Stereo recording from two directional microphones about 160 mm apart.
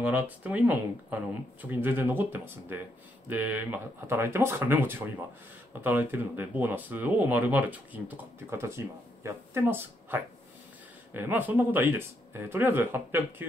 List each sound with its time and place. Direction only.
0.0 s speech: 10° right (ahead or behind)